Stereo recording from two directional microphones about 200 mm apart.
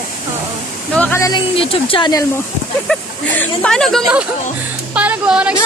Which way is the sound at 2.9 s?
5° left (ahead or behind).